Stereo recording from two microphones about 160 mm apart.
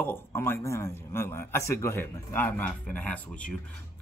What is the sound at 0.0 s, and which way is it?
A man's voice, 15° left (ahead or behind).